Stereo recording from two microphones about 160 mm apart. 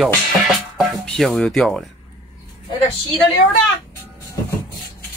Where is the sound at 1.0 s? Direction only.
Centre (ahead or behind).